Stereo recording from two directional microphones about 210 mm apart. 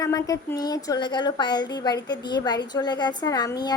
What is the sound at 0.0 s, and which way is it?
A woman's voice, 15° left (ahead or behind).